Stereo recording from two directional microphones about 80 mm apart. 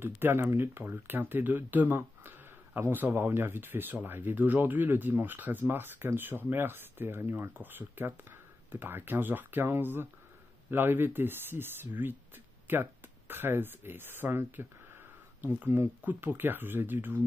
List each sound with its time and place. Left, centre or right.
0.0 s speech: right